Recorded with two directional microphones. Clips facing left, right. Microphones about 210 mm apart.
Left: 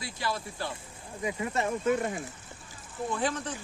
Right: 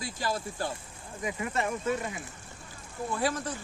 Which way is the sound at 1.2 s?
25° left (ahead or behind).